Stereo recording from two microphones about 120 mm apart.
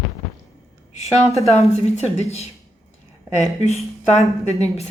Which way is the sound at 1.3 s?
60° left (ahead or behind).